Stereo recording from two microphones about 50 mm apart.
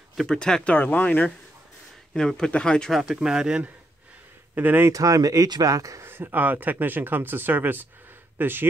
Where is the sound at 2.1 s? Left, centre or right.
Centre.